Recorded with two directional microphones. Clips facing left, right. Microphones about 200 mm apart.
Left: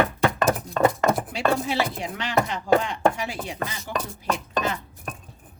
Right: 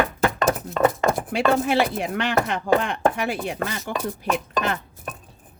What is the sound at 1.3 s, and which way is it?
Chopping, 55° right (ahead or behind).